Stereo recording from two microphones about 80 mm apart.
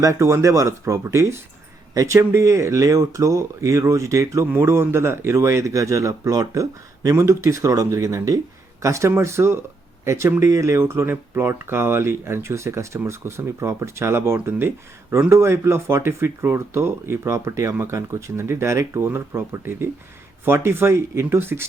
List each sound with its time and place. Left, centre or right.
0.0 s speech: right
4.5 s speech: right